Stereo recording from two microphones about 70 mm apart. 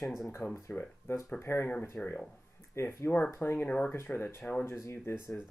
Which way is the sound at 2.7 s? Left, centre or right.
Left.